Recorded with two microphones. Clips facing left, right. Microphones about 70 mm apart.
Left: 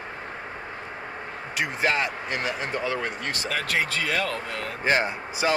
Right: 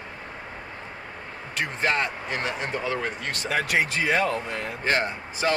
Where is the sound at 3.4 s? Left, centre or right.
Right.